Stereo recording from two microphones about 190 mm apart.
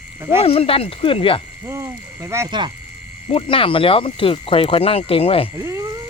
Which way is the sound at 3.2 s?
30° left (ahead or behind).